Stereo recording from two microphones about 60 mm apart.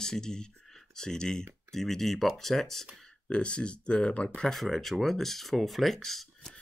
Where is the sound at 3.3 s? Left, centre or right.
Centre.